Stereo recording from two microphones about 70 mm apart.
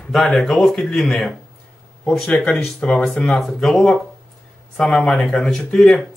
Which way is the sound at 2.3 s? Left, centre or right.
Centre.